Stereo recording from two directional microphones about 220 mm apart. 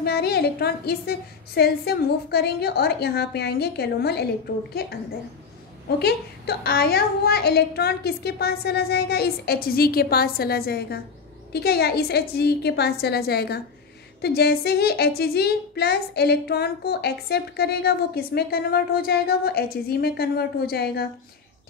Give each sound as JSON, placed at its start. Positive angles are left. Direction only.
{"t": 0.0, "sound": "a woman's voice", "side_deg": 45}
{"t": 5.9, "sound": "a woman's voice", "side_deg": 45}